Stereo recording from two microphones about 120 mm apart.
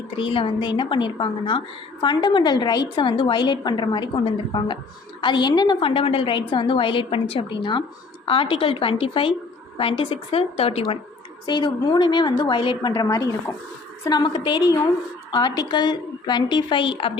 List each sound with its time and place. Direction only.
0.2 s a woman's voice: 45° left (ahead or behind)
5.8 s a woman's voice: 50° left (ahead or behind)
11.4 s a woman's voice: 40° left (ahead or behind)